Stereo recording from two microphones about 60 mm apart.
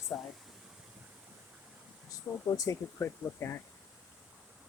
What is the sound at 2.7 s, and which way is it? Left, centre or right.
Speech, left.